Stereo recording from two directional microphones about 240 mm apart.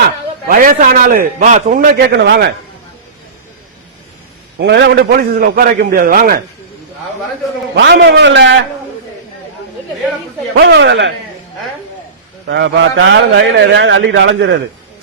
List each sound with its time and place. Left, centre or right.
0.4 s a man's voice: right
2.1 s a man's voice: right
4.5 s a man's voice: right
7.8 s a man's voice: right
10.6 s a man's voice: right
12.5 s a man's voice: right